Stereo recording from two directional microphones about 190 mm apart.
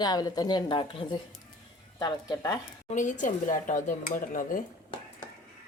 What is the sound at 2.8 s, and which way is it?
Speech, 40° left (ahead or behind).